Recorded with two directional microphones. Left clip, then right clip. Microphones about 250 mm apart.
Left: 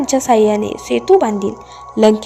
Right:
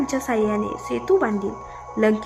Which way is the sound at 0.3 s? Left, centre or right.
Centre.